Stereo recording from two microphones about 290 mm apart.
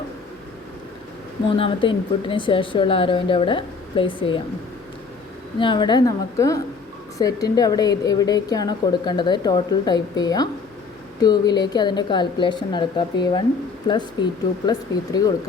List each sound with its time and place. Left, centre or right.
1.5 s a woman's voice: centre
5.5 s a woman's voice: centre